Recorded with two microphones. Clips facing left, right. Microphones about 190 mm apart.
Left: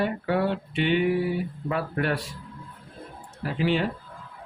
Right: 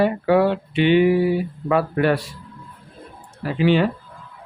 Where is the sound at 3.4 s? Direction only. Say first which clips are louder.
Right 7 dB; 80° right.